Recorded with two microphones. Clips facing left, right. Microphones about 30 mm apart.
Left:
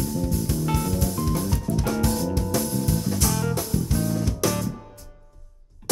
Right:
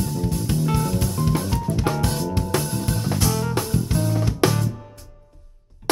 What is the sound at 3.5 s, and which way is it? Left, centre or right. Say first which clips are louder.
Music: right 2 dB; right.